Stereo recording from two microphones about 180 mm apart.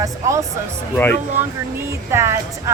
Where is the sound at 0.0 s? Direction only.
15° right (ahead or behind).